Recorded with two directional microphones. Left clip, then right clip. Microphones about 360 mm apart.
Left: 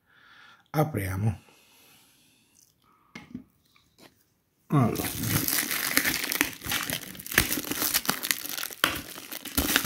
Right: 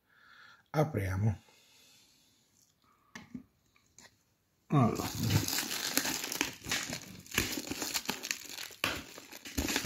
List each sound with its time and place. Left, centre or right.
0.2 s a sound: centre
4.6 s speech: centre
5.6 s crumpling: centre